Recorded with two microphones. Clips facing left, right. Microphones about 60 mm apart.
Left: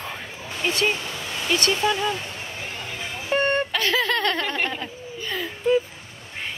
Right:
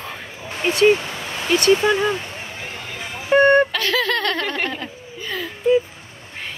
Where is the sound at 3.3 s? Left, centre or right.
Right.